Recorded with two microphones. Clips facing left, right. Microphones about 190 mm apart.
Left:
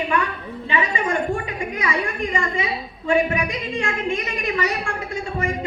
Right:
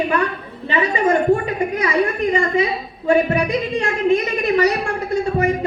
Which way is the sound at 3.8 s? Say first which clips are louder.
Right 7 dB; 40° right (ahead or behind).